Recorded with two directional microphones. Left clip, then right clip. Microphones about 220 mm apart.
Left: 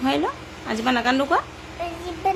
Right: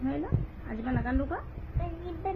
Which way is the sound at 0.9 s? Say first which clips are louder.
Left 13 dB; 40° left (ahead or behind).